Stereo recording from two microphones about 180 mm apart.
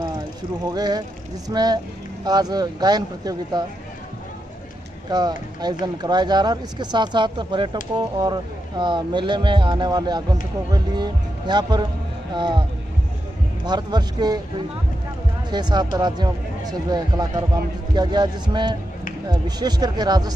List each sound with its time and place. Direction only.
0.7 s speech: 20° right (ahead or behind)
5.1 s speech: 20° right (ahead or behind)
13.7 s speech: 25° right (ahead or behind)
15.5 s speech: 25° right (ahead or behind)